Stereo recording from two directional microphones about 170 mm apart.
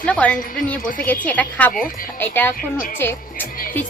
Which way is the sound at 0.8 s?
55° left (ahead or behind).